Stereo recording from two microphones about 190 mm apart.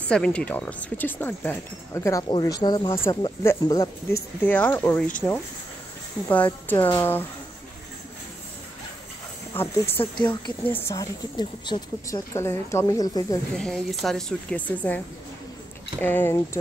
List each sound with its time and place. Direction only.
0.1 s speech: 5° left (ahead or behind)
6.2 s speech: 10° left (ahead or behind)
9.5 s speech: 10° left (ahead or behind)
13.6 s speech: centre (ahead or behind)
16.0 s speech: 10° left (ahead or behind)